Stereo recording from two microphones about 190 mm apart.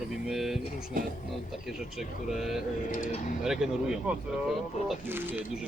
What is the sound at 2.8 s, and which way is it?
Speech, 45° left (ahead or behind).